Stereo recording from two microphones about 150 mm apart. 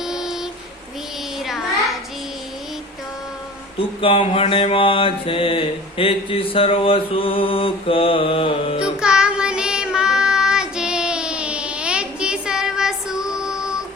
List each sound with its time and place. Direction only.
0.0 s a sound: 5° right (ahead or behind)
1.4 s child singing: centre (ahead or behind)
4.0 s mantra: 35° left (ahead or behind)
8.8 s child singing: 5° right (ahead or behind)